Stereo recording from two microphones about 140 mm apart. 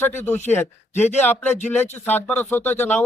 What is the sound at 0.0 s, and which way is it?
Speech, 15° left (ahead or behind).